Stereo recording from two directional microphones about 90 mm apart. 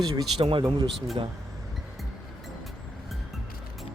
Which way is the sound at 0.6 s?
55° right (ahead or behind).